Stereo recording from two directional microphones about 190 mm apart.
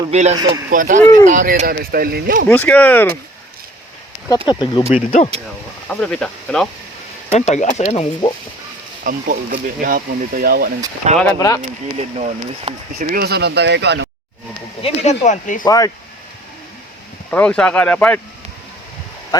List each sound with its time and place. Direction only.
0.1 s speech: 35° right (ahead or behind); by 2.4 s 50° right (ahead or behind)
2.5 s speech: 5° left (ahead or behind)
4.4 s speech: 25° left (ahead or behind)
5.9 s speech: 5° left (ahead or behind)
7.3 s speech: 35° left (ahead or behind)
9.0 s speech: 50° right (ahead or behind)
11.2 s speech: 15° left (ahead or behind)
11.9 s speech: 35° right (ahead or behind)
13.1 s speech: 60° right (ahead or behind)
14.8 s speech: 35° left (ahead or behind)
15.6 s speech: 20° left (ahead or behind)
17.3 s speech: 5° left (ahead or behind)
19.3 s speech: 20° left (ahead or behind)